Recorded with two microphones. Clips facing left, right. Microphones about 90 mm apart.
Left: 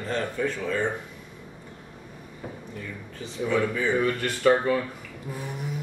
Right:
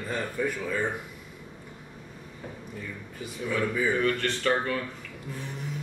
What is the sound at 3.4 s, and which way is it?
A man's voice, centre (ahead or behind).